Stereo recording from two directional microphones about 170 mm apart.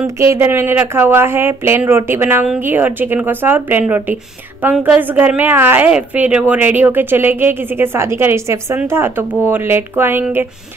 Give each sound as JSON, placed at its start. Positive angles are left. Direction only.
{"t": 0.0, "sound": "a woman's voice", "side_deg": -15}